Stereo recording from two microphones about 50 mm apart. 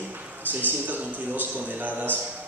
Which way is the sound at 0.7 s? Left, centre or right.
Right.